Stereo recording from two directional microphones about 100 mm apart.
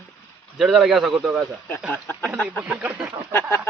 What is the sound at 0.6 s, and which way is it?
Speech, 5° right (ahead or behind).